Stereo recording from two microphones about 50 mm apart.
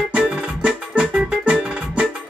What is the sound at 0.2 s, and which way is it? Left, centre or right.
Music, right.